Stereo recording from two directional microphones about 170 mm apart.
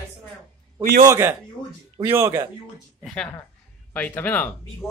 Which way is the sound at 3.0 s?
5° left (ahead or behind).